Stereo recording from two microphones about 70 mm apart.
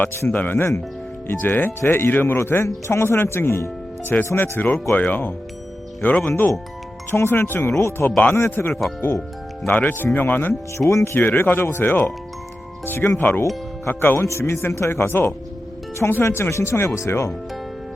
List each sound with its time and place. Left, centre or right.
0.0 s speech: left
0.3 s speech: left
4.1 s speech: left
7.1 s speech: left
10.8 s speech: left
11.3 s speech: left
14.3 s speech: left